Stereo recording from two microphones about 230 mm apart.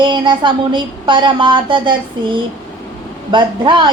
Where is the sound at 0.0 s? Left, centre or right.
Centre.